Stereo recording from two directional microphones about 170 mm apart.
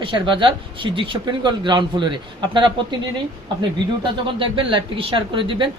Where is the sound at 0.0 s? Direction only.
30° right (ahead or behind).